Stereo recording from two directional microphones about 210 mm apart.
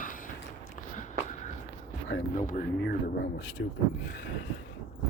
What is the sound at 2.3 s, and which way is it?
Speech, 40° left (ahead or behind).